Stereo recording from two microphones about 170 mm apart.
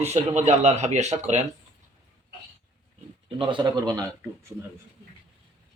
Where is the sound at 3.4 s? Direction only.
25° right (ahead or behind).